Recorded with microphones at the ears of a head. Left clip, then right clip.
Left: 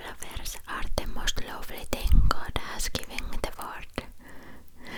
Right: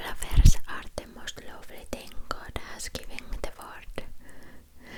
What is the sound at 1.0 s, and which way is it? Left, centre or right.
Whispering, left.